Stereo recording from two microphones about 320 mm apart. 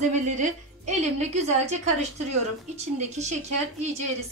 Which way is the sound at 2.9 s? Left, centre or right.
Right.